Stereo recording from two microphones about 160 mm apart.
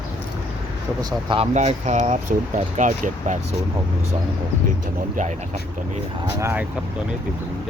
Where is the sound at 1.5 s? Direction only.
50° right (ahead or behind).